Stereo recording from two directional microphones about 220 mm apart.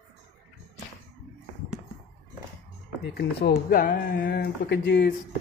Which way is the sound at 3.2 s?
45° left (ahead or behind).